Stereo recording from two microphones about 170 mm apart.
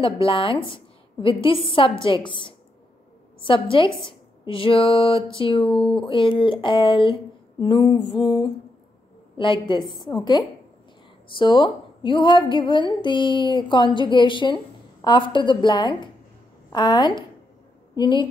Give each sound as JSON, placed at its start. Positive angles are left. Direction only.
{"t": 0.0, "sound": "a woman's voice", "side_deg": 30}
{"t": 5.7, "sound": "speech", "side_deg": 5}
{"t": 5.9, "sound": "a woman's voice", "side_deg": 30}